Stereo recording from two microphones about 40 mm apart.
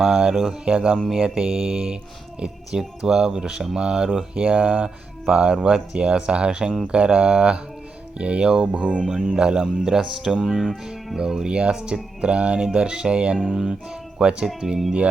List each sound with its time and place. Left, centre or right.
0.1 s speech: centre
1.5 s speech: centre; by 4.9 s right
5.2 s speech: right
9.0 s speech: right
11.4 s speech: right